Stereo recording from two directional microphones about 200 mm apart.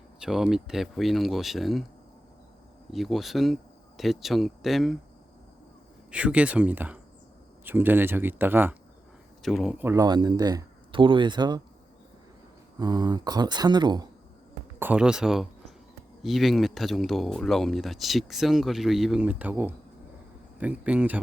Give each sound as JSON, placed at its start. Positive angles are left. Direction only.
{"t": 0.2, "sound": "speech", "side_deg": 0}
{"t": 2.9, "sound": "speech", "side_deg": 0}
{"t": 6.1, "sound": "speech", "side_deg": -5}
{"t": 9.4, "sound": "speech", "side_deg": 0}
{"t": 12.8, "sound": "speech", "side_deg": -20}
{"t": 14.8, "sound": "speech", "side_deg": -5}